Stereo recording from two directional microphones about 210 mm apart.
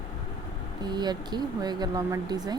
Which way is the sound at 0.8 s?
20° right (ahead or behind).